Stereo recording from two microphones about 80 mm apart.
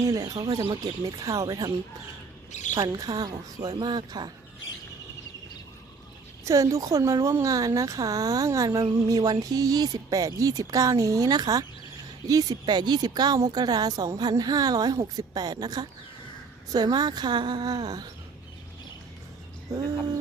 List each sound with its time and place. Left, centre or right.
0.0 s a woman's voice: right
2.7 s a woman's voice: right
6.4 s a woman's voice: right